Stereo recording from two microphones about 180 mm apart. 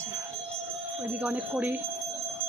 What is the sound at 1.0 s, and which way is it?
Speech, 10° right (ahead or behind).